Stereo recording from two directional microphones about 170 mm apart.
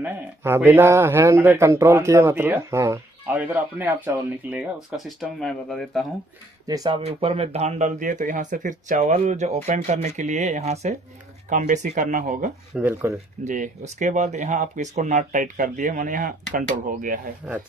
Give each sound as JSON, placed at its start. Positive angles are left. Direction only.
{"t": 0.0, "sound": "speech", "side_deg": -10}
{"t": 4.9, "sound": "speech", "side_deg": 0}
{"t": 6.7, "sound": "speech", "side_deg": -25}
{"t": 7.1, "sound": "speech", "side_deg": -35}
{"t": 12.7, "sound": "speech", "side_deg": -10}
{"t": 13.4, "sound": "speech", "side_deg": -45}
{"t": 17.4, "sound": "speech", "side_deg": -5}